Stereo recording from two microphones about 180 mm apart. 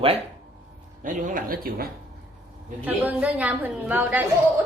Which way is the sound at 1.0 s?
50° right (ahead or behind).